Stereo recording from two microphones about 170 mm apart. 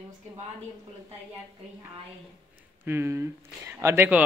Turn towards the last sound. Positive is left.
turn(degrees=-10)  # may be behind; listen again after turning